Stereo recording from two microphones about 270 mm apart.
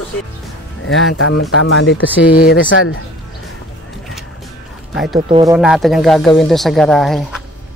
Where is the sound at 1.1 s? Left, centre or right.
Left.